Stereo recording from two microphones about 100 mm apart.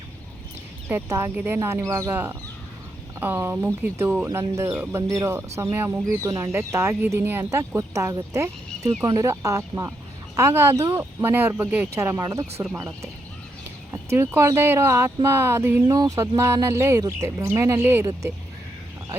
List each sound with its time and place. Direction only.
0.9 s speech: 25° right (ahead or behind)
15.9 s speech: 35° right (ahead or behind)